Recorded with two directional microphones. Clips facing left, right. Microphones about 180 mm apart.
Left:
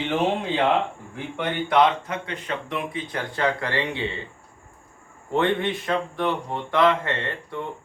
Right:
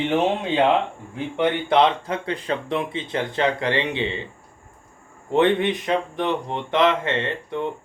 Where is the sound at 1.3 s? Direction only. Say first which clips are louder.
Right 2 dB; 30° right (ahead or behind).